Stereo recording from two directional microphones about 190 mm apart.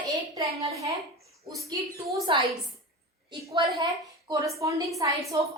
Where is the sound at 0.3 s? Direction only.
15° right (ahead or behind).